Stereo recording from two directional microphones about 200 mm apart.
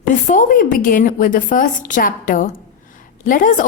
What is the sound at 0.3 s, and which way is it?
A woman's voice, 40° left (ahead or behind).